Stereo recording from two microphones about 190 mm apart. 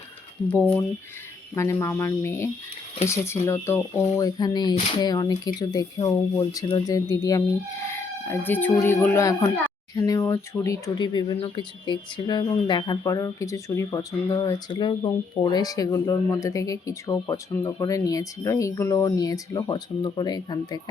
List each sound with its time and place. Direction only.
1.5 s speech: 15° left (ahead or behind)
7.9 s a sound: 15° left (ahead or behind)
8.7 s speech: 15° left (ahead or behind)